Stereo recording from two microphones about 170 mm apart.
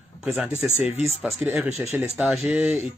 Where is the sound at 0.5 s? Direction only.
40° right (ahead or behind).